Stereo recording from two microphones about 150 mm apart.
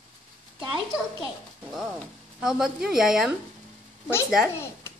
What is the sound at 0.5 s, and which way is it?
Speech, 30° right (ahead or behind).